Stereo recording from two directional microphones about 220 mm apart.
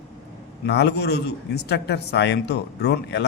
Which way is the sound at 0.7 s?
50° left (ahead or behind).